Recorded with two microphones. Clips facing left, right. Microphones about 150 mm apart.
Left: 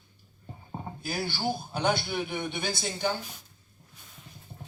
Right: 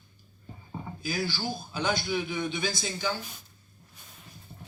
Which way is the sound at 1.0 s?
60° left (ahead or behind).